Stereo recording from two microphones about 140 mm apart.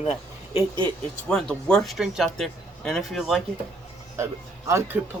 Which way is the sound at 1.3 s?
5° left (ahead or behind).